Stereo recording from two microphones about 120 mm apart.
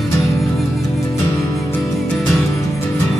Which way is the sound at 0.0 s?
Centre (ahead or behind).